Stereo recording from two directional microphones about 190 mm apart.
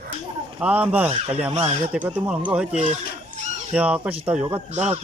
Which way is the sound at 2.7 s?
35° right (ahead or behind).